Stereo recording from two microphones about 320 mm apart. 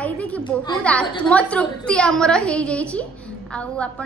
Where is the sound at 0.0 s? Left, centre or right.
Centre.